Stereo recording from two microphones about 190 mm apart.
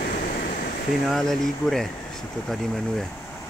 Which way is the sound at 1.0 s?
Centre (ahead or behind).